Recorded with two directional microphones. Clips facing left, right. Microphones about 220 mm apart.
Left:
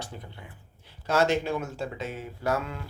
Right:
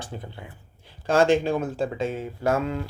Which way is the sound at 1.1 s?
30° right (ahead or behind).